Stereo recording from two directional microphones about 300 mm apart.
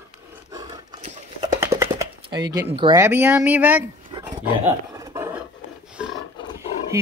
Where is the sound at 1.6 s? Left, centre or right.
Centre.